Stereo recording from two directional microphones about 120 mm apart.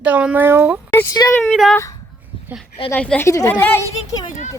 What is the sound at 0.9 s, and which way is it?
Speech, 20° left (ahead or behind).